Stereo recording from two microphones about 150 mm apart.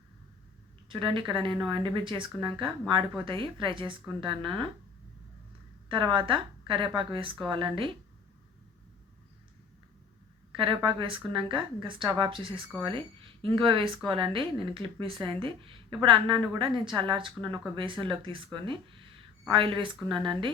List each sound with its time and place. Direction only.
0.9 s speech: 35° right (ahead or behind)
5.9 s speech: 35° right (ahead or behind)
10.5 s a woman's voice: 35° right (ahead or behind)